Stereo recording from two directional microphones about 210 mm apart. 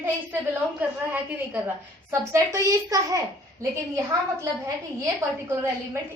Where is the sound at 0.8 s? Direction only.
10° right (ahead or behind).